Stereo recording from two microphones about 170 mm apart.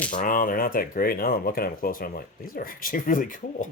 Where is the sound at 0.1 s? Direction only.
55° left (ahead or behind).